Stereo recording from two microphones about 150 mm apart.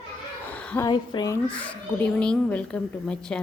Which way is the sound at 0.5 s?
10° left (ahead or behind).